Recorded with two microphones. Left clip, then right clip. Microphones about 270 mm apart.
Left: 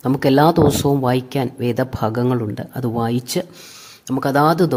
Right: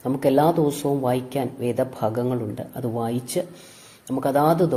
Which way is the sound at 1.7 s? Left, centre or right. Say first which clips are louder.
Left 1 dB; left.